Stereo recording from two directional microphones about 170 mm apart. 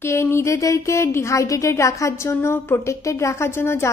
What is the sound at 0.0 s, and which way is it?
Speech, 15° left (ahead or behind).